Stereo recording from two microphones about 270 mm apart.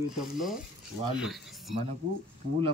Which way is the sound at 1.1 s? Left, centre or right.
Centre.